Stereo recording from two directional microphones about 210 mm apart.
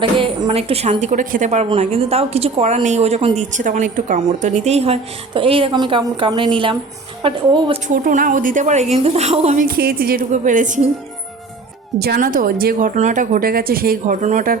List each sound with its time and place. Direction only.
0.2 s a woman's voice: 25° right (ahead or behind)
7.9 s a woman's voice: 40° right (ahead or behind)
9.6 s speech: 45° right (ahead or behind)
11.9 s speech: 45° right (ahead or behind)